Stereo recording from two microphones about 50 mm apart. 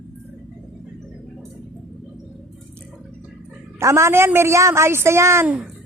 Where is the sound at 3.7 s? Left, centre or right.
Right.